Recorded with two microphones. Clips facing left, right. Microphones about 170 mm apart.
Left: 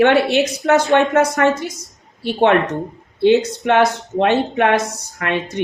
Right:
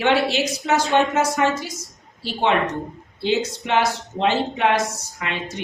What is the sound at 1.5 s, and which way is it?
Speech, centre (ahead or behind).